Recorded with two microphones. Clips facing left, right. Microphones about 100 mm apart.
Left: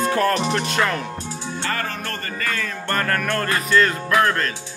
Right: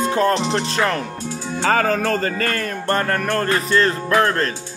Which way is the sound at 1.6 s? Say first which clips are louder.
Right 10 dB; 90° right.